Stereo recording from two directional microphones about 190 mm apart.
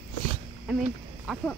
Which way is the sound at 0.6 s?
5° right (ahead or behind).